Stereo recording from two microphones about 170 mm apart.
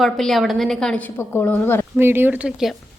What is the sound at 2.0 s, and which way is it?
Speech, 15° right (ahead or behind).